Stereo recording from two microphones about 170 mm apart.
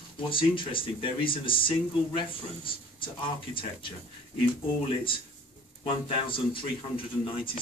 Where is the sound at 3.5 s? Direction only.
30° left (ahead or behind).